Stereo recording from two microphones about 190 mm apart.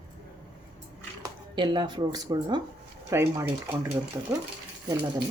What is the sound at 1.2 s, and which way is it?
A woman's voice, 25° right (ahead or behind).